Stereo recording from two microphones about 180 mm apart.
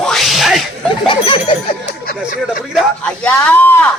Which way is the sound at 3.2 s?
10° left (ahead or behind).